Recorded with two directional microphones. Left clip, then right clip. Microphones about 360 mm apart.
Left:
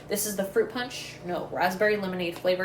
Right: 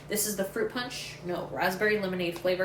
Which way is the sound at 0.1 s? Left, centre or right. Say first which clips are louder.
Left 3 dB; centre.